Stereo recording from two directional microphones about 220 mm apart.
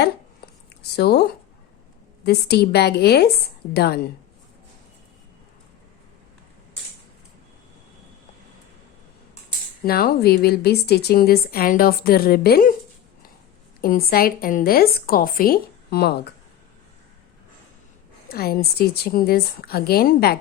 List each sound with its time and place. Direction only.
0.9 s speech: 45° left (ahead or behind)
9.8 s speech: 45° left (ahead or behind)
13.8 s a woman's voice: 40° left (ahead or behind)
18.3 s speech: 45° left (ahead or behind)